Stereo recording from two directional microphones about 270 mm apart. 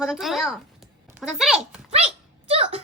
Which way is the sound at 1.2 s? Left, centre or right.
Centre.